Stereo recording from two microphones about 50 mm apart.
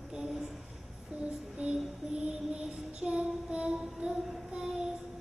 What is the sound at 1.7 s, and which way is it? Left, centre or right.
Child singing, centre.